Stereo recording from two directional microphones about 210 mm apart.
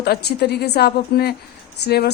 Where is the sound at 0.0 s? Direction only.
50° left (ahead or behind).